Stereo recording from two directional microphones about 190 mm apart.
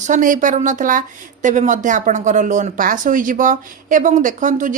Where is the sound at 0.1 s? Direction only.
45° right (ahead or behind).